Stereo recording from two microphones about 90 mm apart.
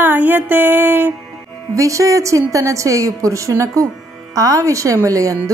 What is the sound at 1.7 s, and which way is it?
Speech, 35° right (ahead or behind).